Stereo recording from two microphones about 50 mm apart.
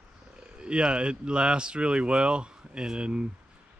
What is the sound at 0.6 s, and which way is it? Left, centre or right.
Speech, centre.